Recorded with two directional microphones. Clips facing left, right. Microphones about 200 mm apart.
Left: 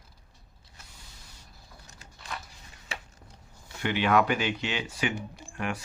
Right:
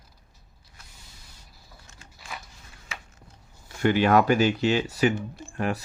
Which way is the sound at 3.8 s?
45° right (ahead or behind).